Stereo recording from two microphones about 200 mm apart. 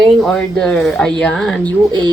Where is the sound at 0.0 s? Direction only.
Centre (ahead or behind).